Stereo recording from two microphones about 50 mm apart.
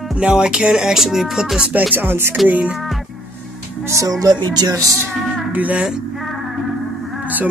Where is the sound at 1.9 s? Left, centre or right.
Right.